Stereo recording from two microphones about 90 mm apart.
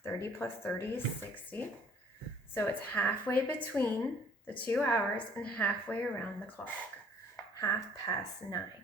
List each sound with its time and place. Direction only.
0.0 s speech: 25° left (ahead or behind)
7.6 s a woman's voice: 40° left (ahead or behind)